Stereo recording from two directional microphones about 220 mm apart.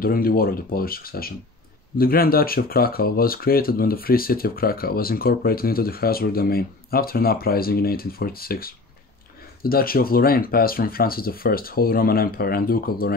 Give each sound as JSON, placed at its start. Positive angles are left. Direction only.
{"t": 0.0, "sound": "speech", "side_deg": 40}